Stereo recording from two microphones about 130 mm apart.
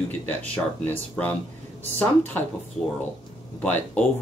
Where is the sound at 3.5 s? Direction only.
15° left (ahead or behind).